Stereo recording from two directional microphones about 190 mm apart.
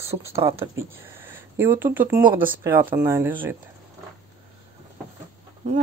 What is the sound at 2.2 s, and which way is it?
Speech, 50° right (ahead or behind).